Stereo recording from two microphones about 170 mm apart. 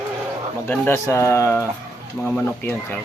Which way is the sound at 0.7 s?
15° left (ahead or behind).